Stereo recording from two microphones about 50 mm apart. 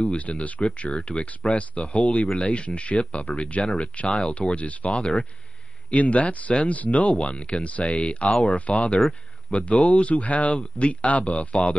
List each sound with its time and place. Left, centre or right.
0.0 s speech: left
7.8 s speech: centre
8.1 s speech: left